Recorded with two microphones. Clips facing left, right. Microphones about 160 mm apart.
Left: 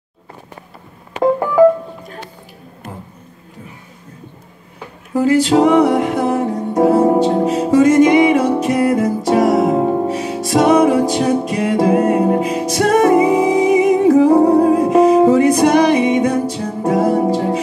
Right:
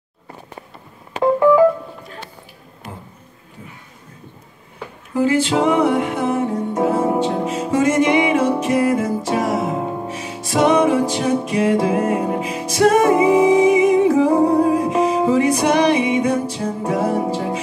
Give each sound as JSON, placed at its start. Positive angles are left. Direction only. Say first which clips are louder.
{"t": 1.4, "sound": "music", "louder": "left 1 dB", "side_deg": 45}
{"t": 5.2, "sound": "music", "louder": "left 4 dB", "side_deg": 40}